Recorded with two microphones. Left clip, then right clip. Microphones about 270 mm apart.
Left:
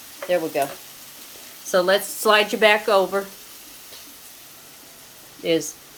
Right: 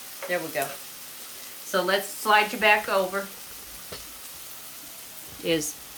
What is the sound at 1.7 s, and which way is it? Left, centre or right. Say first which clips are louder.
Speech: left 6 dB; left.